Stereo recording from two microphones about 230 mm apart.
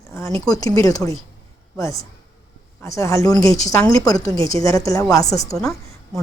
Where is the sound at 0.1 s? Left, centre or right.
Centre.